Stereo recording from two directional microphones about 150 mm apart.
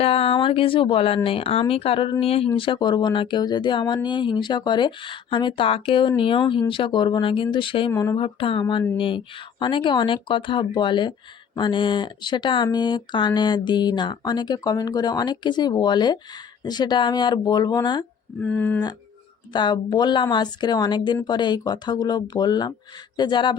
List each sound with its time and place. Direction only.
0.0 s speech: 40° left (ahead or behind)
7.9 s speech: 20° left (ahead or behind)
8.2 s speech: 35° left (ahead or behind)
18.3 s speech: 10° left (ahead or behind)
19.5 s speech: 30° left (ahead or behind)